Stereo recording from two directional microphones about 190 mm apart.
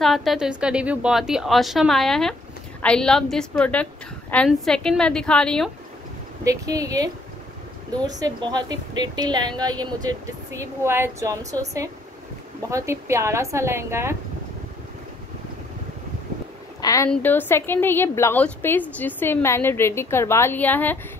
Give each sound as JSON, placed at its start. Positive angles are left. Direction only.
{"t": 0.0, "sound": "a woman's voice", "side_deg": 0}
{"t": 6.4, "sound": "a woman's voice", "side_deg": -15}
{"t": 16.8, "sound": "a woman's voice", "side_deg": 15}